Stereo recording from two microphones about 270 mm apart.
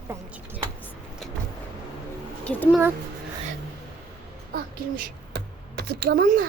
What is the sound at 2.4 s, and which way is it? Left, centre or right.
Speech, centre.